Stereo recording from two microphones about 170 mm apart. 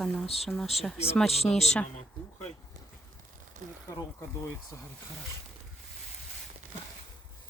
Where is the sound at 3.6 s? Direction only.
45° right (ahead or behind).